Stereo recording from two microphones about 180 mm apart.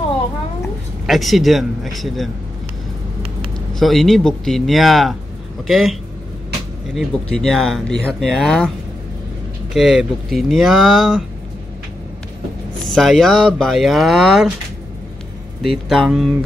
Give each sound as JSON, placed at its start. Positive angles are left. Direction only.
{"t": 1.0, "sound": "speech", "side_deg": 0}
{"t": 3.8, "sound": "speech", "side_deg": 0}
{"t": 9.8, "sound": "speech", "side_deg": 0}
{"t": 12.8, "sound": "speech", "side_deg": 0}
{"t": 15.6, "sound": "speech", "side_deg": 0}